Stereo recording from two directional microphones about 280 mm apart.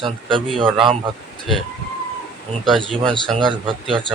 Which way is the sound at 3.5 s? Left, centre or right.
Centre.